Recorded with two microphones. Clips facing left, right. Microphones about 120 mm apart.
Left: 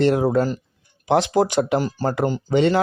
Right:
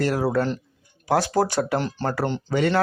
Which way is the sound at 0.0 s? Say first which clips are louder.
Left 4 dB; 20° left (ahead or behind).